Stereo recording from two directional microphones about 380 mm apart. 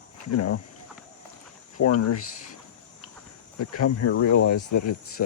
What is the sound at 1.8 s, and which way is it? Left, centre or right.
Speech, left.